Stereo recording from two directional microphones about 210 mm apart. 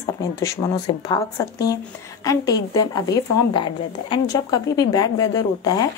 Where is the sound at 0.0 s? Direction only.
15° left (ahead or behind).